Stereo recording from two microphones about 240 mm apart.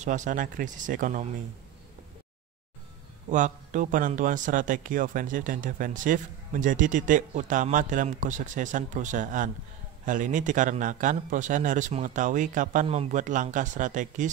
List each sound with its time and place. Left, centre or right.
0.0 s speech: right
3.3 s speech: right